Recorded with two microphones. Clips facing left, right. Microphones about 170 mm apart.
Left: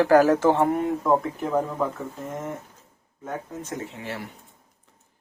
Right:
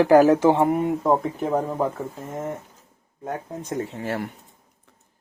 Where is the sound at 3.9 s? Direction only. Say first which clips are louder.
Right 6 dB; 45° right (ahead or behind).